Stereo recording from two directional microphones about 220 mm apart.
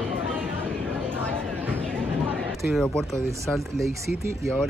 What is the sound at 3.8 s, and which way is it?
Speech, 15° right (ahead or behind).